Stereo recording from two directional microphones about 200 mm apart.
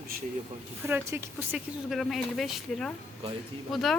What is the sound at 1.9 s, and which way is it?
A woman's voice, centre (ahead or behind).